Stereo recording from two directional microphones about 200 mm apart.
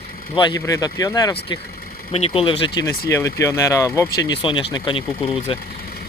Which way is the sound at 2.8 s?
15° left (ahead or behind).